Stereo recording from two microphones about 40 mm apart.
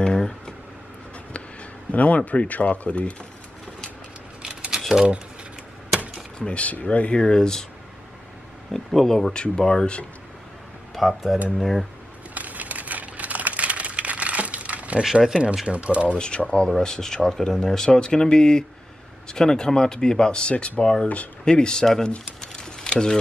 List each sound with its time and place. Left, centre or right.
0.0 s a sound: left
1.3 s speech: left
4.4 s a sound: right
6.3 s speech: left
7.2 s speech: centre
8.7 s speech: centre
9.3 s speech: centre
11.0 s speech: centre
12.4 s crumpling: right
15.2 s speech: right
16.2 s speech: left
16.6 s speech: centre
22.4 s a sound: centre